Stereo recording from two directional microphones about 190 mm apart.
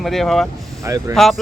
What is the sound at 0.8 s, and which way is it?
Speech, 15° right (ahead or behind).